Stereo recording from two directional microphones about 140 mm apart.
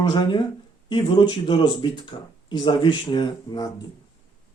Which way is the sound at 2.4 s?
35° left (ahead or behind).